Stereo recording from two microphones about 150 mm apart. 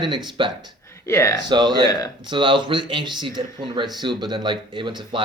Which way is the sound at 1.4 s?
30° right (ahead or behind).